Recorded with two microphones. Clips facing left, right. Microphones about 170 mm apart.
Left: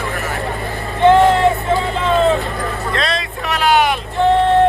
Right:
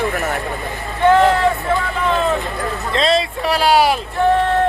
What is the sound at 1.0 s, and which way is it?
Speech, 25° left (ahead or behind).